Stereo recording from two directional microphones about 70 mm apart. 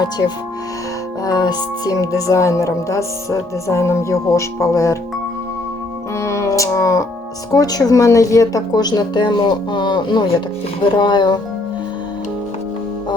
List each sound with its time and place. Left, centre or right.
1.2 s speech: left
6.1 s music: left
7.5 s speech: left
8.7 s speech: left